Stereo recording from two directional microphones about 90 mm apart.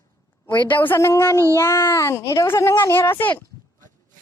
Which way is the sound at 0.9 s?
30° left (ahead or behind).